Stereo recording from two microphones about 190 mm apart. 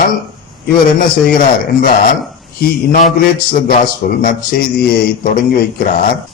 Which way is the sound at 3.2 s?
50° left (ahead or behind).